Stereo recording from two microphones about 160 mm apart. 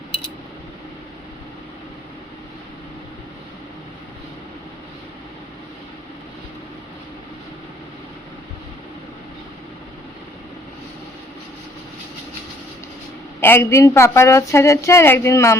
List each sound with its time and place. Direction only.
13.4 s a woman's voice: 15° left (ahead or behind)